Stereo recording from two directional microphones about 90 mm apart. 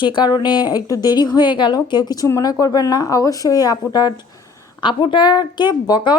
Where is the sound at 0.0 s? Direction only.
55° left (ahead or behind).